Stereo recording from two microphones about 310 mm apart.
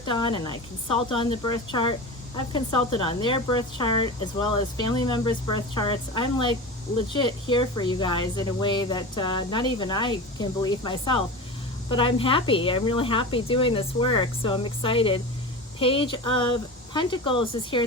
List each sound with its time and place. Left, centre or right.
0.0 s speech: centre